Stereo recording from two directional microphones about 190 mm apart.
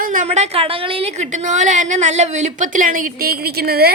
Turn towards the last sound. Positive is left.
turn(degrees=-55)  # may be behind; listen again after turning